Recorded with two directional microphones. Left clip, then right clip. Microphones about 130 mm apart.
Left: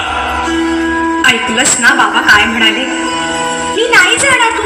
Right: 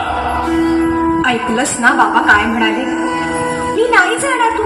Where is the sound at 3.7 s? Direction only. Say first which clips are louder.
Left 3 dB; 40° right (ahead or behind).